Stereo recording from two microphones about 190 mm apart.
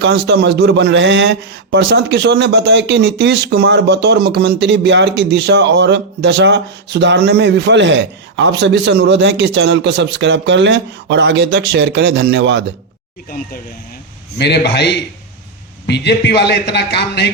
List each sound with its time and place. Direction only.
0.0 s a man's voice: 60° right (ahead or behind)
13.3 s a man's voice: 50° left (ahead or behind)